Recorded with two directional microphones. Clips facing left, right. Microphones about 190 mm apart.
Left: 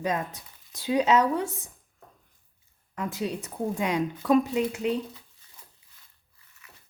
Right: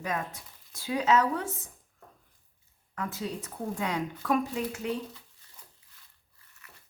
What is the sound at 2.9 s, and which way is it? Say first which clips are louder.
Speech: left 4 dB; 15° left (ahead or behind).